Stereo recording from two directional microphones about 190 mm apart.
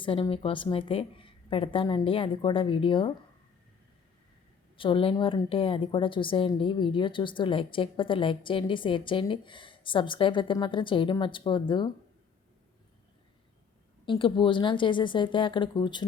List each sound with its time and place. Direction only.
0.0 s a woman's voice: 30° left (ahead or behind)
4.8 s a woman's voice: 25° left (ahead or behind)
14.0 s a woman's voice: 25° left (ahead or behind)